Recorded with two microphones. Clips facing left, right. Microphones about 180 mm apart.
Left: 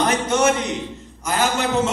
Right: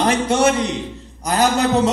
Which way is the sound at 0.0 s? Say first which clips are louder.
Right 2 dB; 30° right (ahead or behind).